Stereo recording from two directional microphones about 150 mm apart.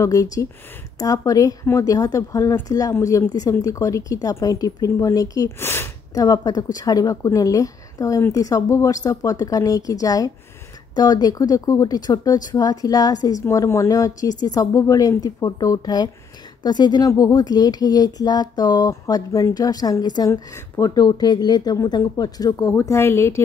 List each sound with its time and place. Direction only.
0.0 s speech: 20° left (ahead or behind)